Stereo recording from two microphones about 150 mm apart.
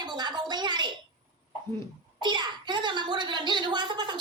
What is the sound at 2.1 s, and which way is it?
A child's voice, 30° right (ahead or behind).